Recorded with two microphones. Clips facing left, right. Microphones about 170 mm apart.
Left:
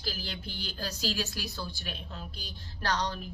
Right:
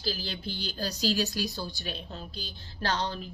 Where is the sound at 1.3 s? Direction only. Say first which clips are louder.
Right 5 dB; 30° right (ahead or behind).